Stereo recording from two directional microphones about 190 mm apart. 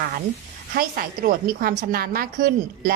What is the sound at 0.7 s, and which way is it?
A woman's voice, 50° right (ahead or behind).